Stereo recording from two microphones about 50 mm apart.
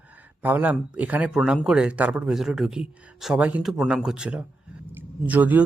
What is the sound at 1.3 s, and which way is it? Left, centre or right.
Speech, centre.